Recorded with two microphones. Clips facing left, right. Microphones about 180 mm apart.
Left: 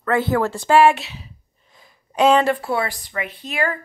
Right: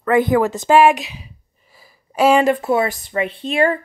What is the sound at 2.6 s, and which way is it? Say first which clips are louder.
Speech: right 5 dB; 20° right (ahead or behind).